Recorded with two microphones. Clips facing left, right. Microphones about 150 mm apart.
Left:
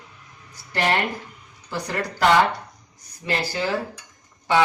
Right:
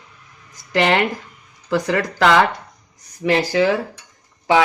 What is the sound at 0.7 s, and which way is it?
Speech, 90° right.